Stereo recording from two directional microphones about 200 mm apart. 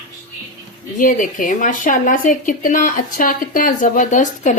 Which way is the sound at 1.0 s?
40° left (ahead or behind).